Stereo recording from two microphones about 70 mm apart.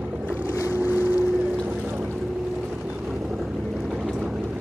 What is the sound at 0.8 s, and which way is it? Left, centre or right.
Boat, right.